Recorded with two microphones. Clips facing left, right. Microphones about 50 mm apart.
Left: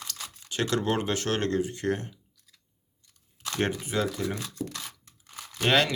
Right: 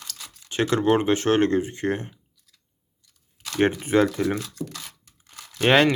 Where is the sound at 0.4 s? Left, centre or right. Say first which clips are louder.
Right 6 dB; right.